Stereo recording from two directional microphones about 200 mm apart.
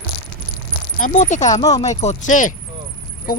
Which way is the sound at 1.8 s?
35° left (ahead or behind).